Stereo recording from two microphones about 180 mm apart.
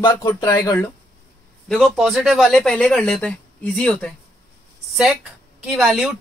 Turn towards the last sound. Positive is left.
turn(degrees=0)  # may be behind; listen again after turning